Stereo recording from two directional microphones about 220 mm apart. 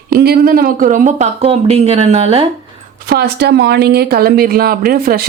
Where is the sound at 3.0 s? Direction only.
45° right (ahead or behind).